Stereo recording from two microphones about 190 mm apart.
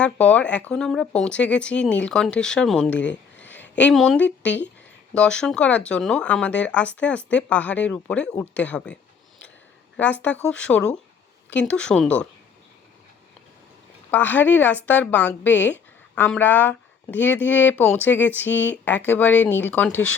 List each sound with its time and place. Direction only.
0.0 s speech: 5° left (ahead or behind)
2.9 s a sound: 70° left (ahead or behind)
3.8 s speech: 5° left (ahead or behind)
10.0 s speech: 10° left (ahead or behind)
14.1 s speech: 10° left (ahead or behind)